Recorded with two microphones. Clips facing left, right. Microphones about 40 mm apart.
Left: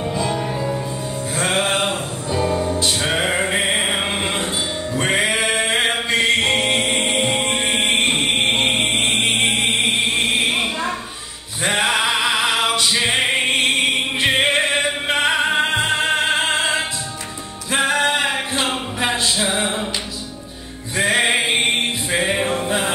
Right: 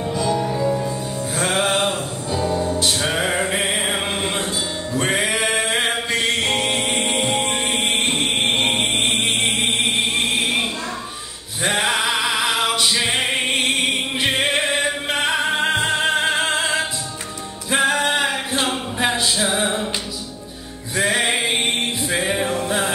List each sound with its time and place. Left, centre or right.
0.1 s music: left
0.6 s music: centre
3.4 s mantra: left
4.9 s music: left
5.9 s music: left
8.5 s mantra: left
10.1 s a sound: left
11.6 s singing: centre
12.9 s music: left
18.2 s a sound: centre
19.2 s music: left
20.9 s music: centre
21.2 s music: left